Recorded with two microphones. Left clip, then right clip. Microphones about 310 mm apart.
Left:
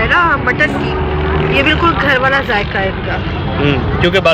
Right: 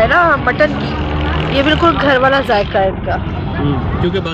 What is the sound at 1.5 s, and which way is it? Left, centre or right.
Speech, right.